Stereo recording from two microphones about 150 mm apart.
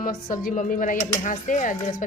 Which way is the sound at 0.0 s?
70° left (ahead or behind).